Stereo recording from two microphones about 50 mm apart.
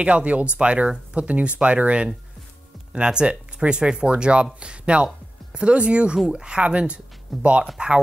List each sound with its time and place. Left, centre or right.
0.0 s speech: right
7.3 s speech: centre
7.8 s speech: centre